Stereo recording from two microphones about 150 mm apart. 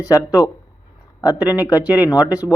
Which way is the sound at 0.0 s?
25° left (ahead or behind).